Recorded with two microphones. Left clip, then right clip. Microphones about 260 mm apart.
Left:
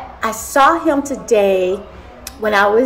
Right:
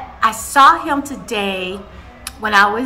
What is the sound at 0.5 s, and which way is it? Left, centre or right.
Speech, centre.